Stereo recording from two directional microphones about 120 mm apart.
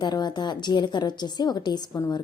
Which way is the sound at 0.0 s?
35° left (ahead or behind).